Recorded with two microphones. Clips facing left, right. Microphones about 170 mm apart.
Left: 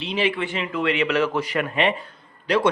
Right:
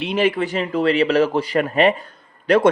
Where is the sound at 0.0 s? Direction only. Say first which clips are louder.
Right 5 dB; 50° right (ahead or behind).